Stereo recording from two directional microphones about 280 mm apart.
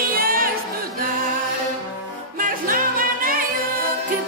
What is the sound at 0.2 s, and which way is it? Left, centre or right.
Music, right.